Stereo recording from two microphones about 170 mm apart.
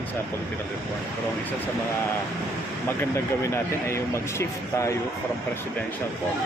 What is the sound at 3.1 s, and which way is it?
Speech, 15° left (ahead or behind).